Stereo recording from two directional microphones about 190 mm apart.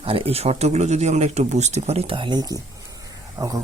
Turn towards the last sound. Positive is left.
turn(degrees=-20)  # may be behind; listen again after turning